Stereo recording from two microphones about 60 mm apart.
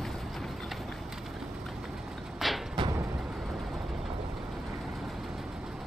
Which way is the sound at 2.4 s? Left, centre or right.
Centre.